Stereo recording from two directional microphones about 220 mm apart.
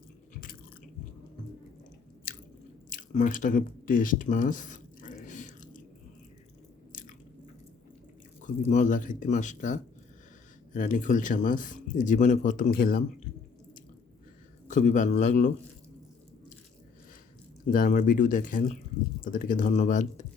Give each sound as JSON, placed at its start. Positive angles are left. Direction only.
{"t": 2.9, "sound": "a sound", "side_deg": 35}
{"t": 8.4, "sound": "speech", "side_deg": 35}
{"t": 14.7, "sound": "speech", "side_deg": 35}
{"t": 17.7, "sound": "speech", "side_deg": 40}